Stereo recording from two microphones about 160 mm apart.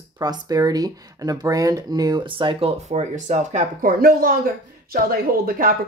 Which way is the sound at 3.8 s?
60° right (ahead or behind).